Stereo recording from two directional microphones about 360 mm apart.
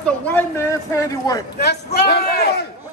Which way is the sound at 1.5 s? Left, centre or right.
Left.